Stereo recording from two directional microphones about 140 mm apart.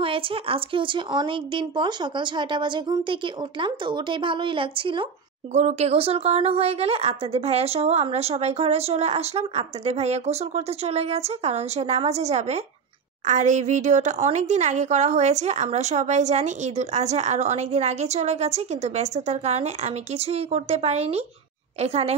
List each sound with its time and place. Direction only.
0.0 s speech: 40° right (ahead or behind)
5.5 s speech: 55° right (ahead or behind)